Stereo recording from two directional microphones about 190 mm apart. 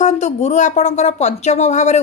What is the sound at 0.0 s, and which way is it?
Speech, 40° left (ahead or behind).